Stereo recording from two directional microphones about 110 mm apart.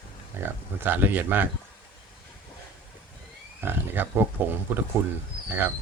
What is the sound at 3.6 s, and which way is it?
Speech, 20° right (ahead or behind).